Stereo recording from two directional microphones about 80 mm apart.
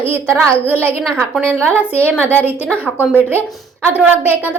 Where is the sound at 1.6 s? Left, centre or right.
Centre.